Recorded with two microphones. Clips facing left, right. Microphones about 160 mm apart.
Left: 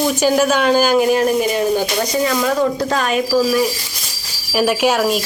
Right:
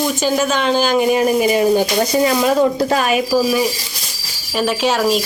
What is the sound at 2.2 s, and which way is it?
Speech, 20° right (ahead or behind).